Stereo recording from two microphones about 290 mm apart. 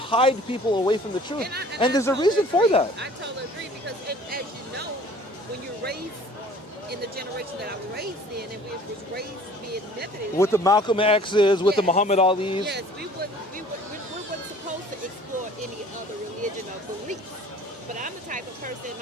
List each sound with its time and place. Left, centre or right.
0.1 s speech: centre
1.4 s speech: right
1.8 s a man's voice: centre
4.3 s music: right
7.2 s speech: right
10.3 s a man's voice: centre
12.6 s speech: right
17.9 s music: right